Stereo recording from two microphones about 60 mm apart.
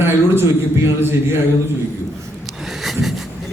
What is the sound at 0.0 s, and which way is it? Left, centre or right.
A man's voice, right.